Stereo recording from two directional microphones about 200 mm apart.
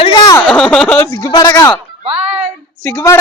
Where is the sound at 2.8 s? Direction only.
15° left (ahead or behind).